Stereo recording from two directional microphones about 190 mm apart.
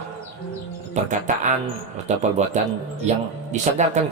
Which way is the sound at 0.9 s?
40° right (ahead or behind).